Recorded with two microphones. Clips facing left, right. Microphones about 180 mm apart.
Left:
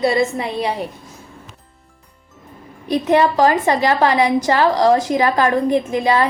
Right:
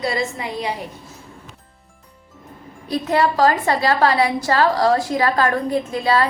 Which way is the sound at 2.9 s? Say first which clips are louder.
Left 4 dB; 20° left (ahead or behind).